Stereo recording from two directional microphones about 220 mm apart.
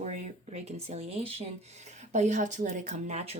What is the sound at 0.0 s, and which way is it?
Speech, 30° right (ahead or behind).